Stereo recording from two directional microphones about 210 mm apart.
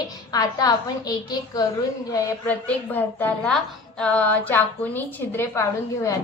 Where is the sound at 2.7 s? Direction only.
5° left (ahead or behind).